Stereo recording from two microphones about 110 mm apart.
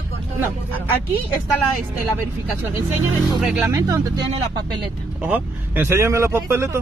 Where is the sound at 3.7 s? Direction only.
25° right (ahead or behind).